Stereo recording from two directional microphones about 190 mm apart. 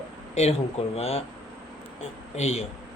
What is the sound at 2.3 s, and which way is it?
Speech, 35° left (ahead or behind).